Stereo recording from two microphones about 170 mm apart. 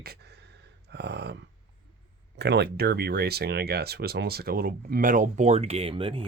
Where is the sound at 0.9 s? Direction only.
75° right (ahead or behind).